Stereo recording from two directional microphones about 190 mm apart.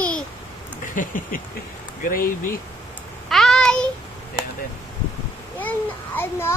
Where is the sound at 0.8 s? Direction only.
45° left (ahead or behind).